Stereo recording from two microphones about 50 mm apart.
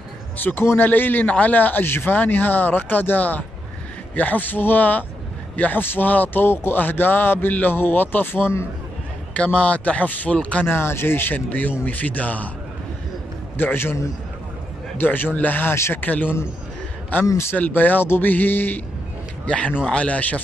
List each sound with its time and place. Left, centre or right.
0.4 s a man's voice: left
1.2 s a man's voice: left
1.9 s speech: left
2.1 s a man's voice: left
6.8 s a man's voice: left
9.3 s speech: left
10.7 s speech: left
11.3 s a man's voice: left
13.6 s speech: left
15.0 s a man's voice: left
19.4 s a man's voice: left